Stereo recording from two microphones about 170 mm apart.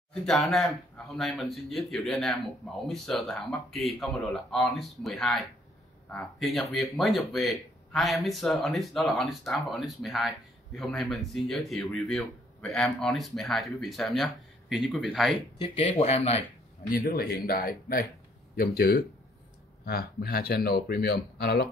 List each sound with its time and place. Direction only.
0.1 s speech: centre (ahead or behind)
15.6 s speech: 30° left (ahead or behind)
16.9 s speech: 60° left (ahead or behind)